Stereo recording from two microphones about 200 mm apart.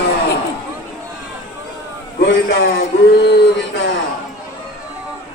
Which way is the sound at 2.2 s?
55° left (ahead or behind).